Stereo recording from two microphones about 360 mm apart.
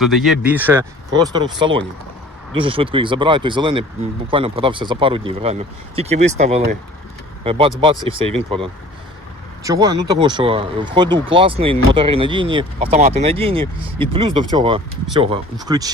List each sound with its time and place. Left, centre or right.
0.0 s speech: centre